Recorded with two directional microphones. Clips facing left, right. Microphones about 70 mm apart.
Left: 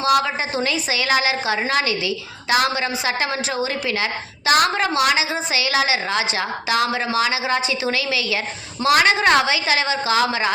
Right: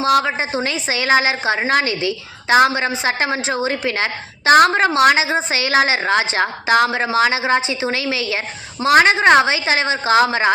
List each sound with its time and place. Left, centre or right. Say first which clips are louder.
0.0 s a woman's voice: right 2 dB; right